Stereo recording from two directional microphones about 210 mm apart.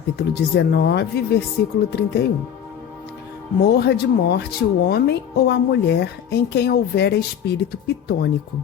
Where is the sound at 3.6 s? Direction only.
50° left (ahead or behind).